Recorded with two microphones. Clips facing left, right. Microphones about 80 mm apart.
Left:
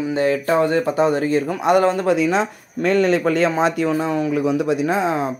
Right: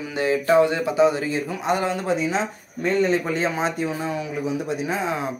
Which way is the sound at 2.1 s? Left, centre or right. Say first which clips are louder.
Left 5 dB; left.